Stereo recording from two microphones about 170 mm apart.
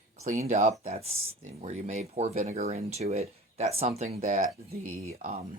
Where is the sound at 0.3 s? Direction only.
45° right (ahead or behind).